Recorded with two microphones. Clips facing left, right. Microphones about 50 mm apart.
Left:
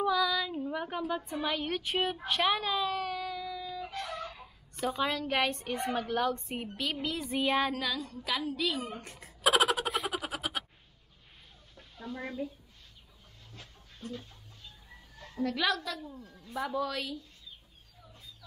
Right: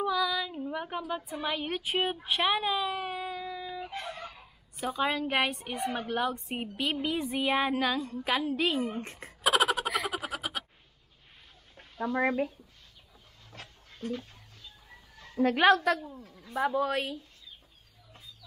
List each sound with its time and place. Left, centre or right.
0.0 s female singing: centre
1.4 s speech: centre; by 4.2 s right
4.2 s a sound: centre
5.1 s speech: centre
7.3 s speech: centre
7.8 s a woman's voice: right
9.4 s a sound: centre
10.0 s frog: centre
12.0 s speech: right
13.5 s dog: right
15.3 s a woman's voice: right
16.0 s speech: centre
16.5 s a woman's voice: right